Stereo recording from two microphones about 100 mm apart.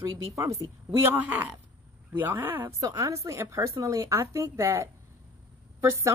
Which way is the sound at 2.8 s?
35° right (ahead or behind).